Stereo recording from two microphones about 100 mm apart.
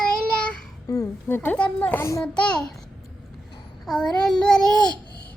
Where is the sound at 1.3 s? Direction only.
20° left (ahead or behind).